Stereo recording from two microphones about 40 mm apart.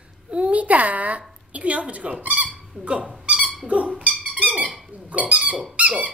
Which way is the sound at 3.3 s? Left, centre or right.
Right.